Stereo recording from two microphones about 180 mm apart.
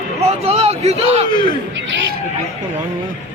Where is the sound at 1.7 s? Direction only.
80° right.